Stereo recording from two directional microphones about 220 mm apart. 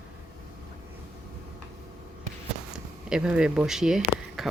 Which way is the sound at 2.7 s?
5° right (ahead or behind).